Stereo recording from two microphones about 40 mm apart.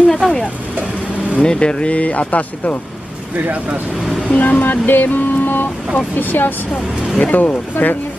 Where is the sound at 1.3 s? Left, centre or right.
Left.